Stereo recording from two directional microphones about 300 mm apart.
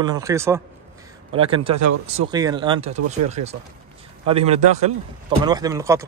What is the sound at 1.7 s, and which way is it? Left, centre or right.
Speech, right.